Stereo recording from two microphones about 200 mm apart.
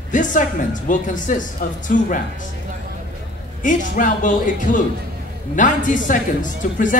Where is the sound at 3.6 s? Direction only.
40° left (ahead or behind).